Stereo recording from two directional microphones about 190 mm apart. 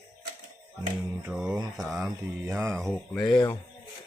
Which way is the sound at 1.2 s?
5° right (ahead or behind).